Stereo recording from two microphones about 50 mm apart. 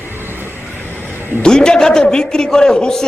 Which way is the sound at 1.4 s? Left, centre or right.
Centre.